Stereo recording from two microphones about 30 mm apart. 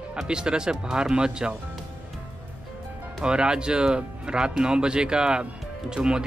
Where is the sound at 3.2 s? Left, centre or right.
Right.